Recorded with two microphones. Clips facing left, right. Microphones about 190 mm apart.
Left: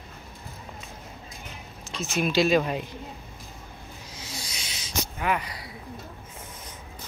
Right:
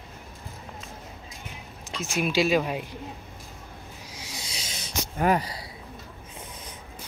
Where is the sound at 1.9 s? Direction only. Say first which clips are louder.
Left 1 dB; 10° right (ahead or behind).